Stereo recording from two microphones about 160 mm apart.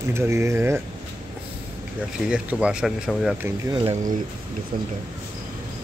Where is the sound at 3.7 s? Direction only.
35° right (ahead or behind).